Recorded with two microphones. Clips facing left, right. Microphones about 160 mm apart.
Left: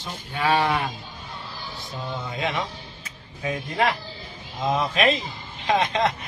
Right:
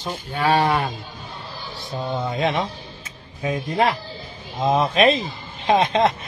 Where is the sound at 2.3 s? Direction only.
30° right (ahead or behind).